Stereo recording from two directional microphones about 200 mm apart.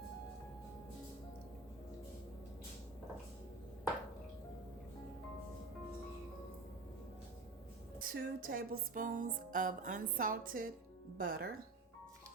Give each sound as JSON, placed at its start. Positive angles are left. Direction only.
{"t": 7.9, "sound": "music", "side_deg": -45}